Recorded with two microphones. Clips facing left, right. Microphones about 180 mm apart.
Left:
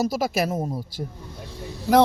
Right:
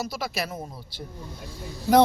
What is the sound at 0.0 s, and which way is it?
A man's voice, 45° left (ahead or behind).